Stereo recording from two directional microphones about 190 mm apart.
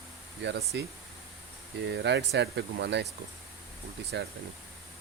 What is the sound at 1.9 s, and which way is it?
Speech, 65° right (ahead or behind).